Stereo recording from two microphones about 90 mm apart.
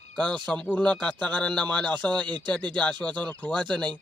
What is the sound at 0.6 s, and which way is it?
Speech, 15° left (ahead or behind).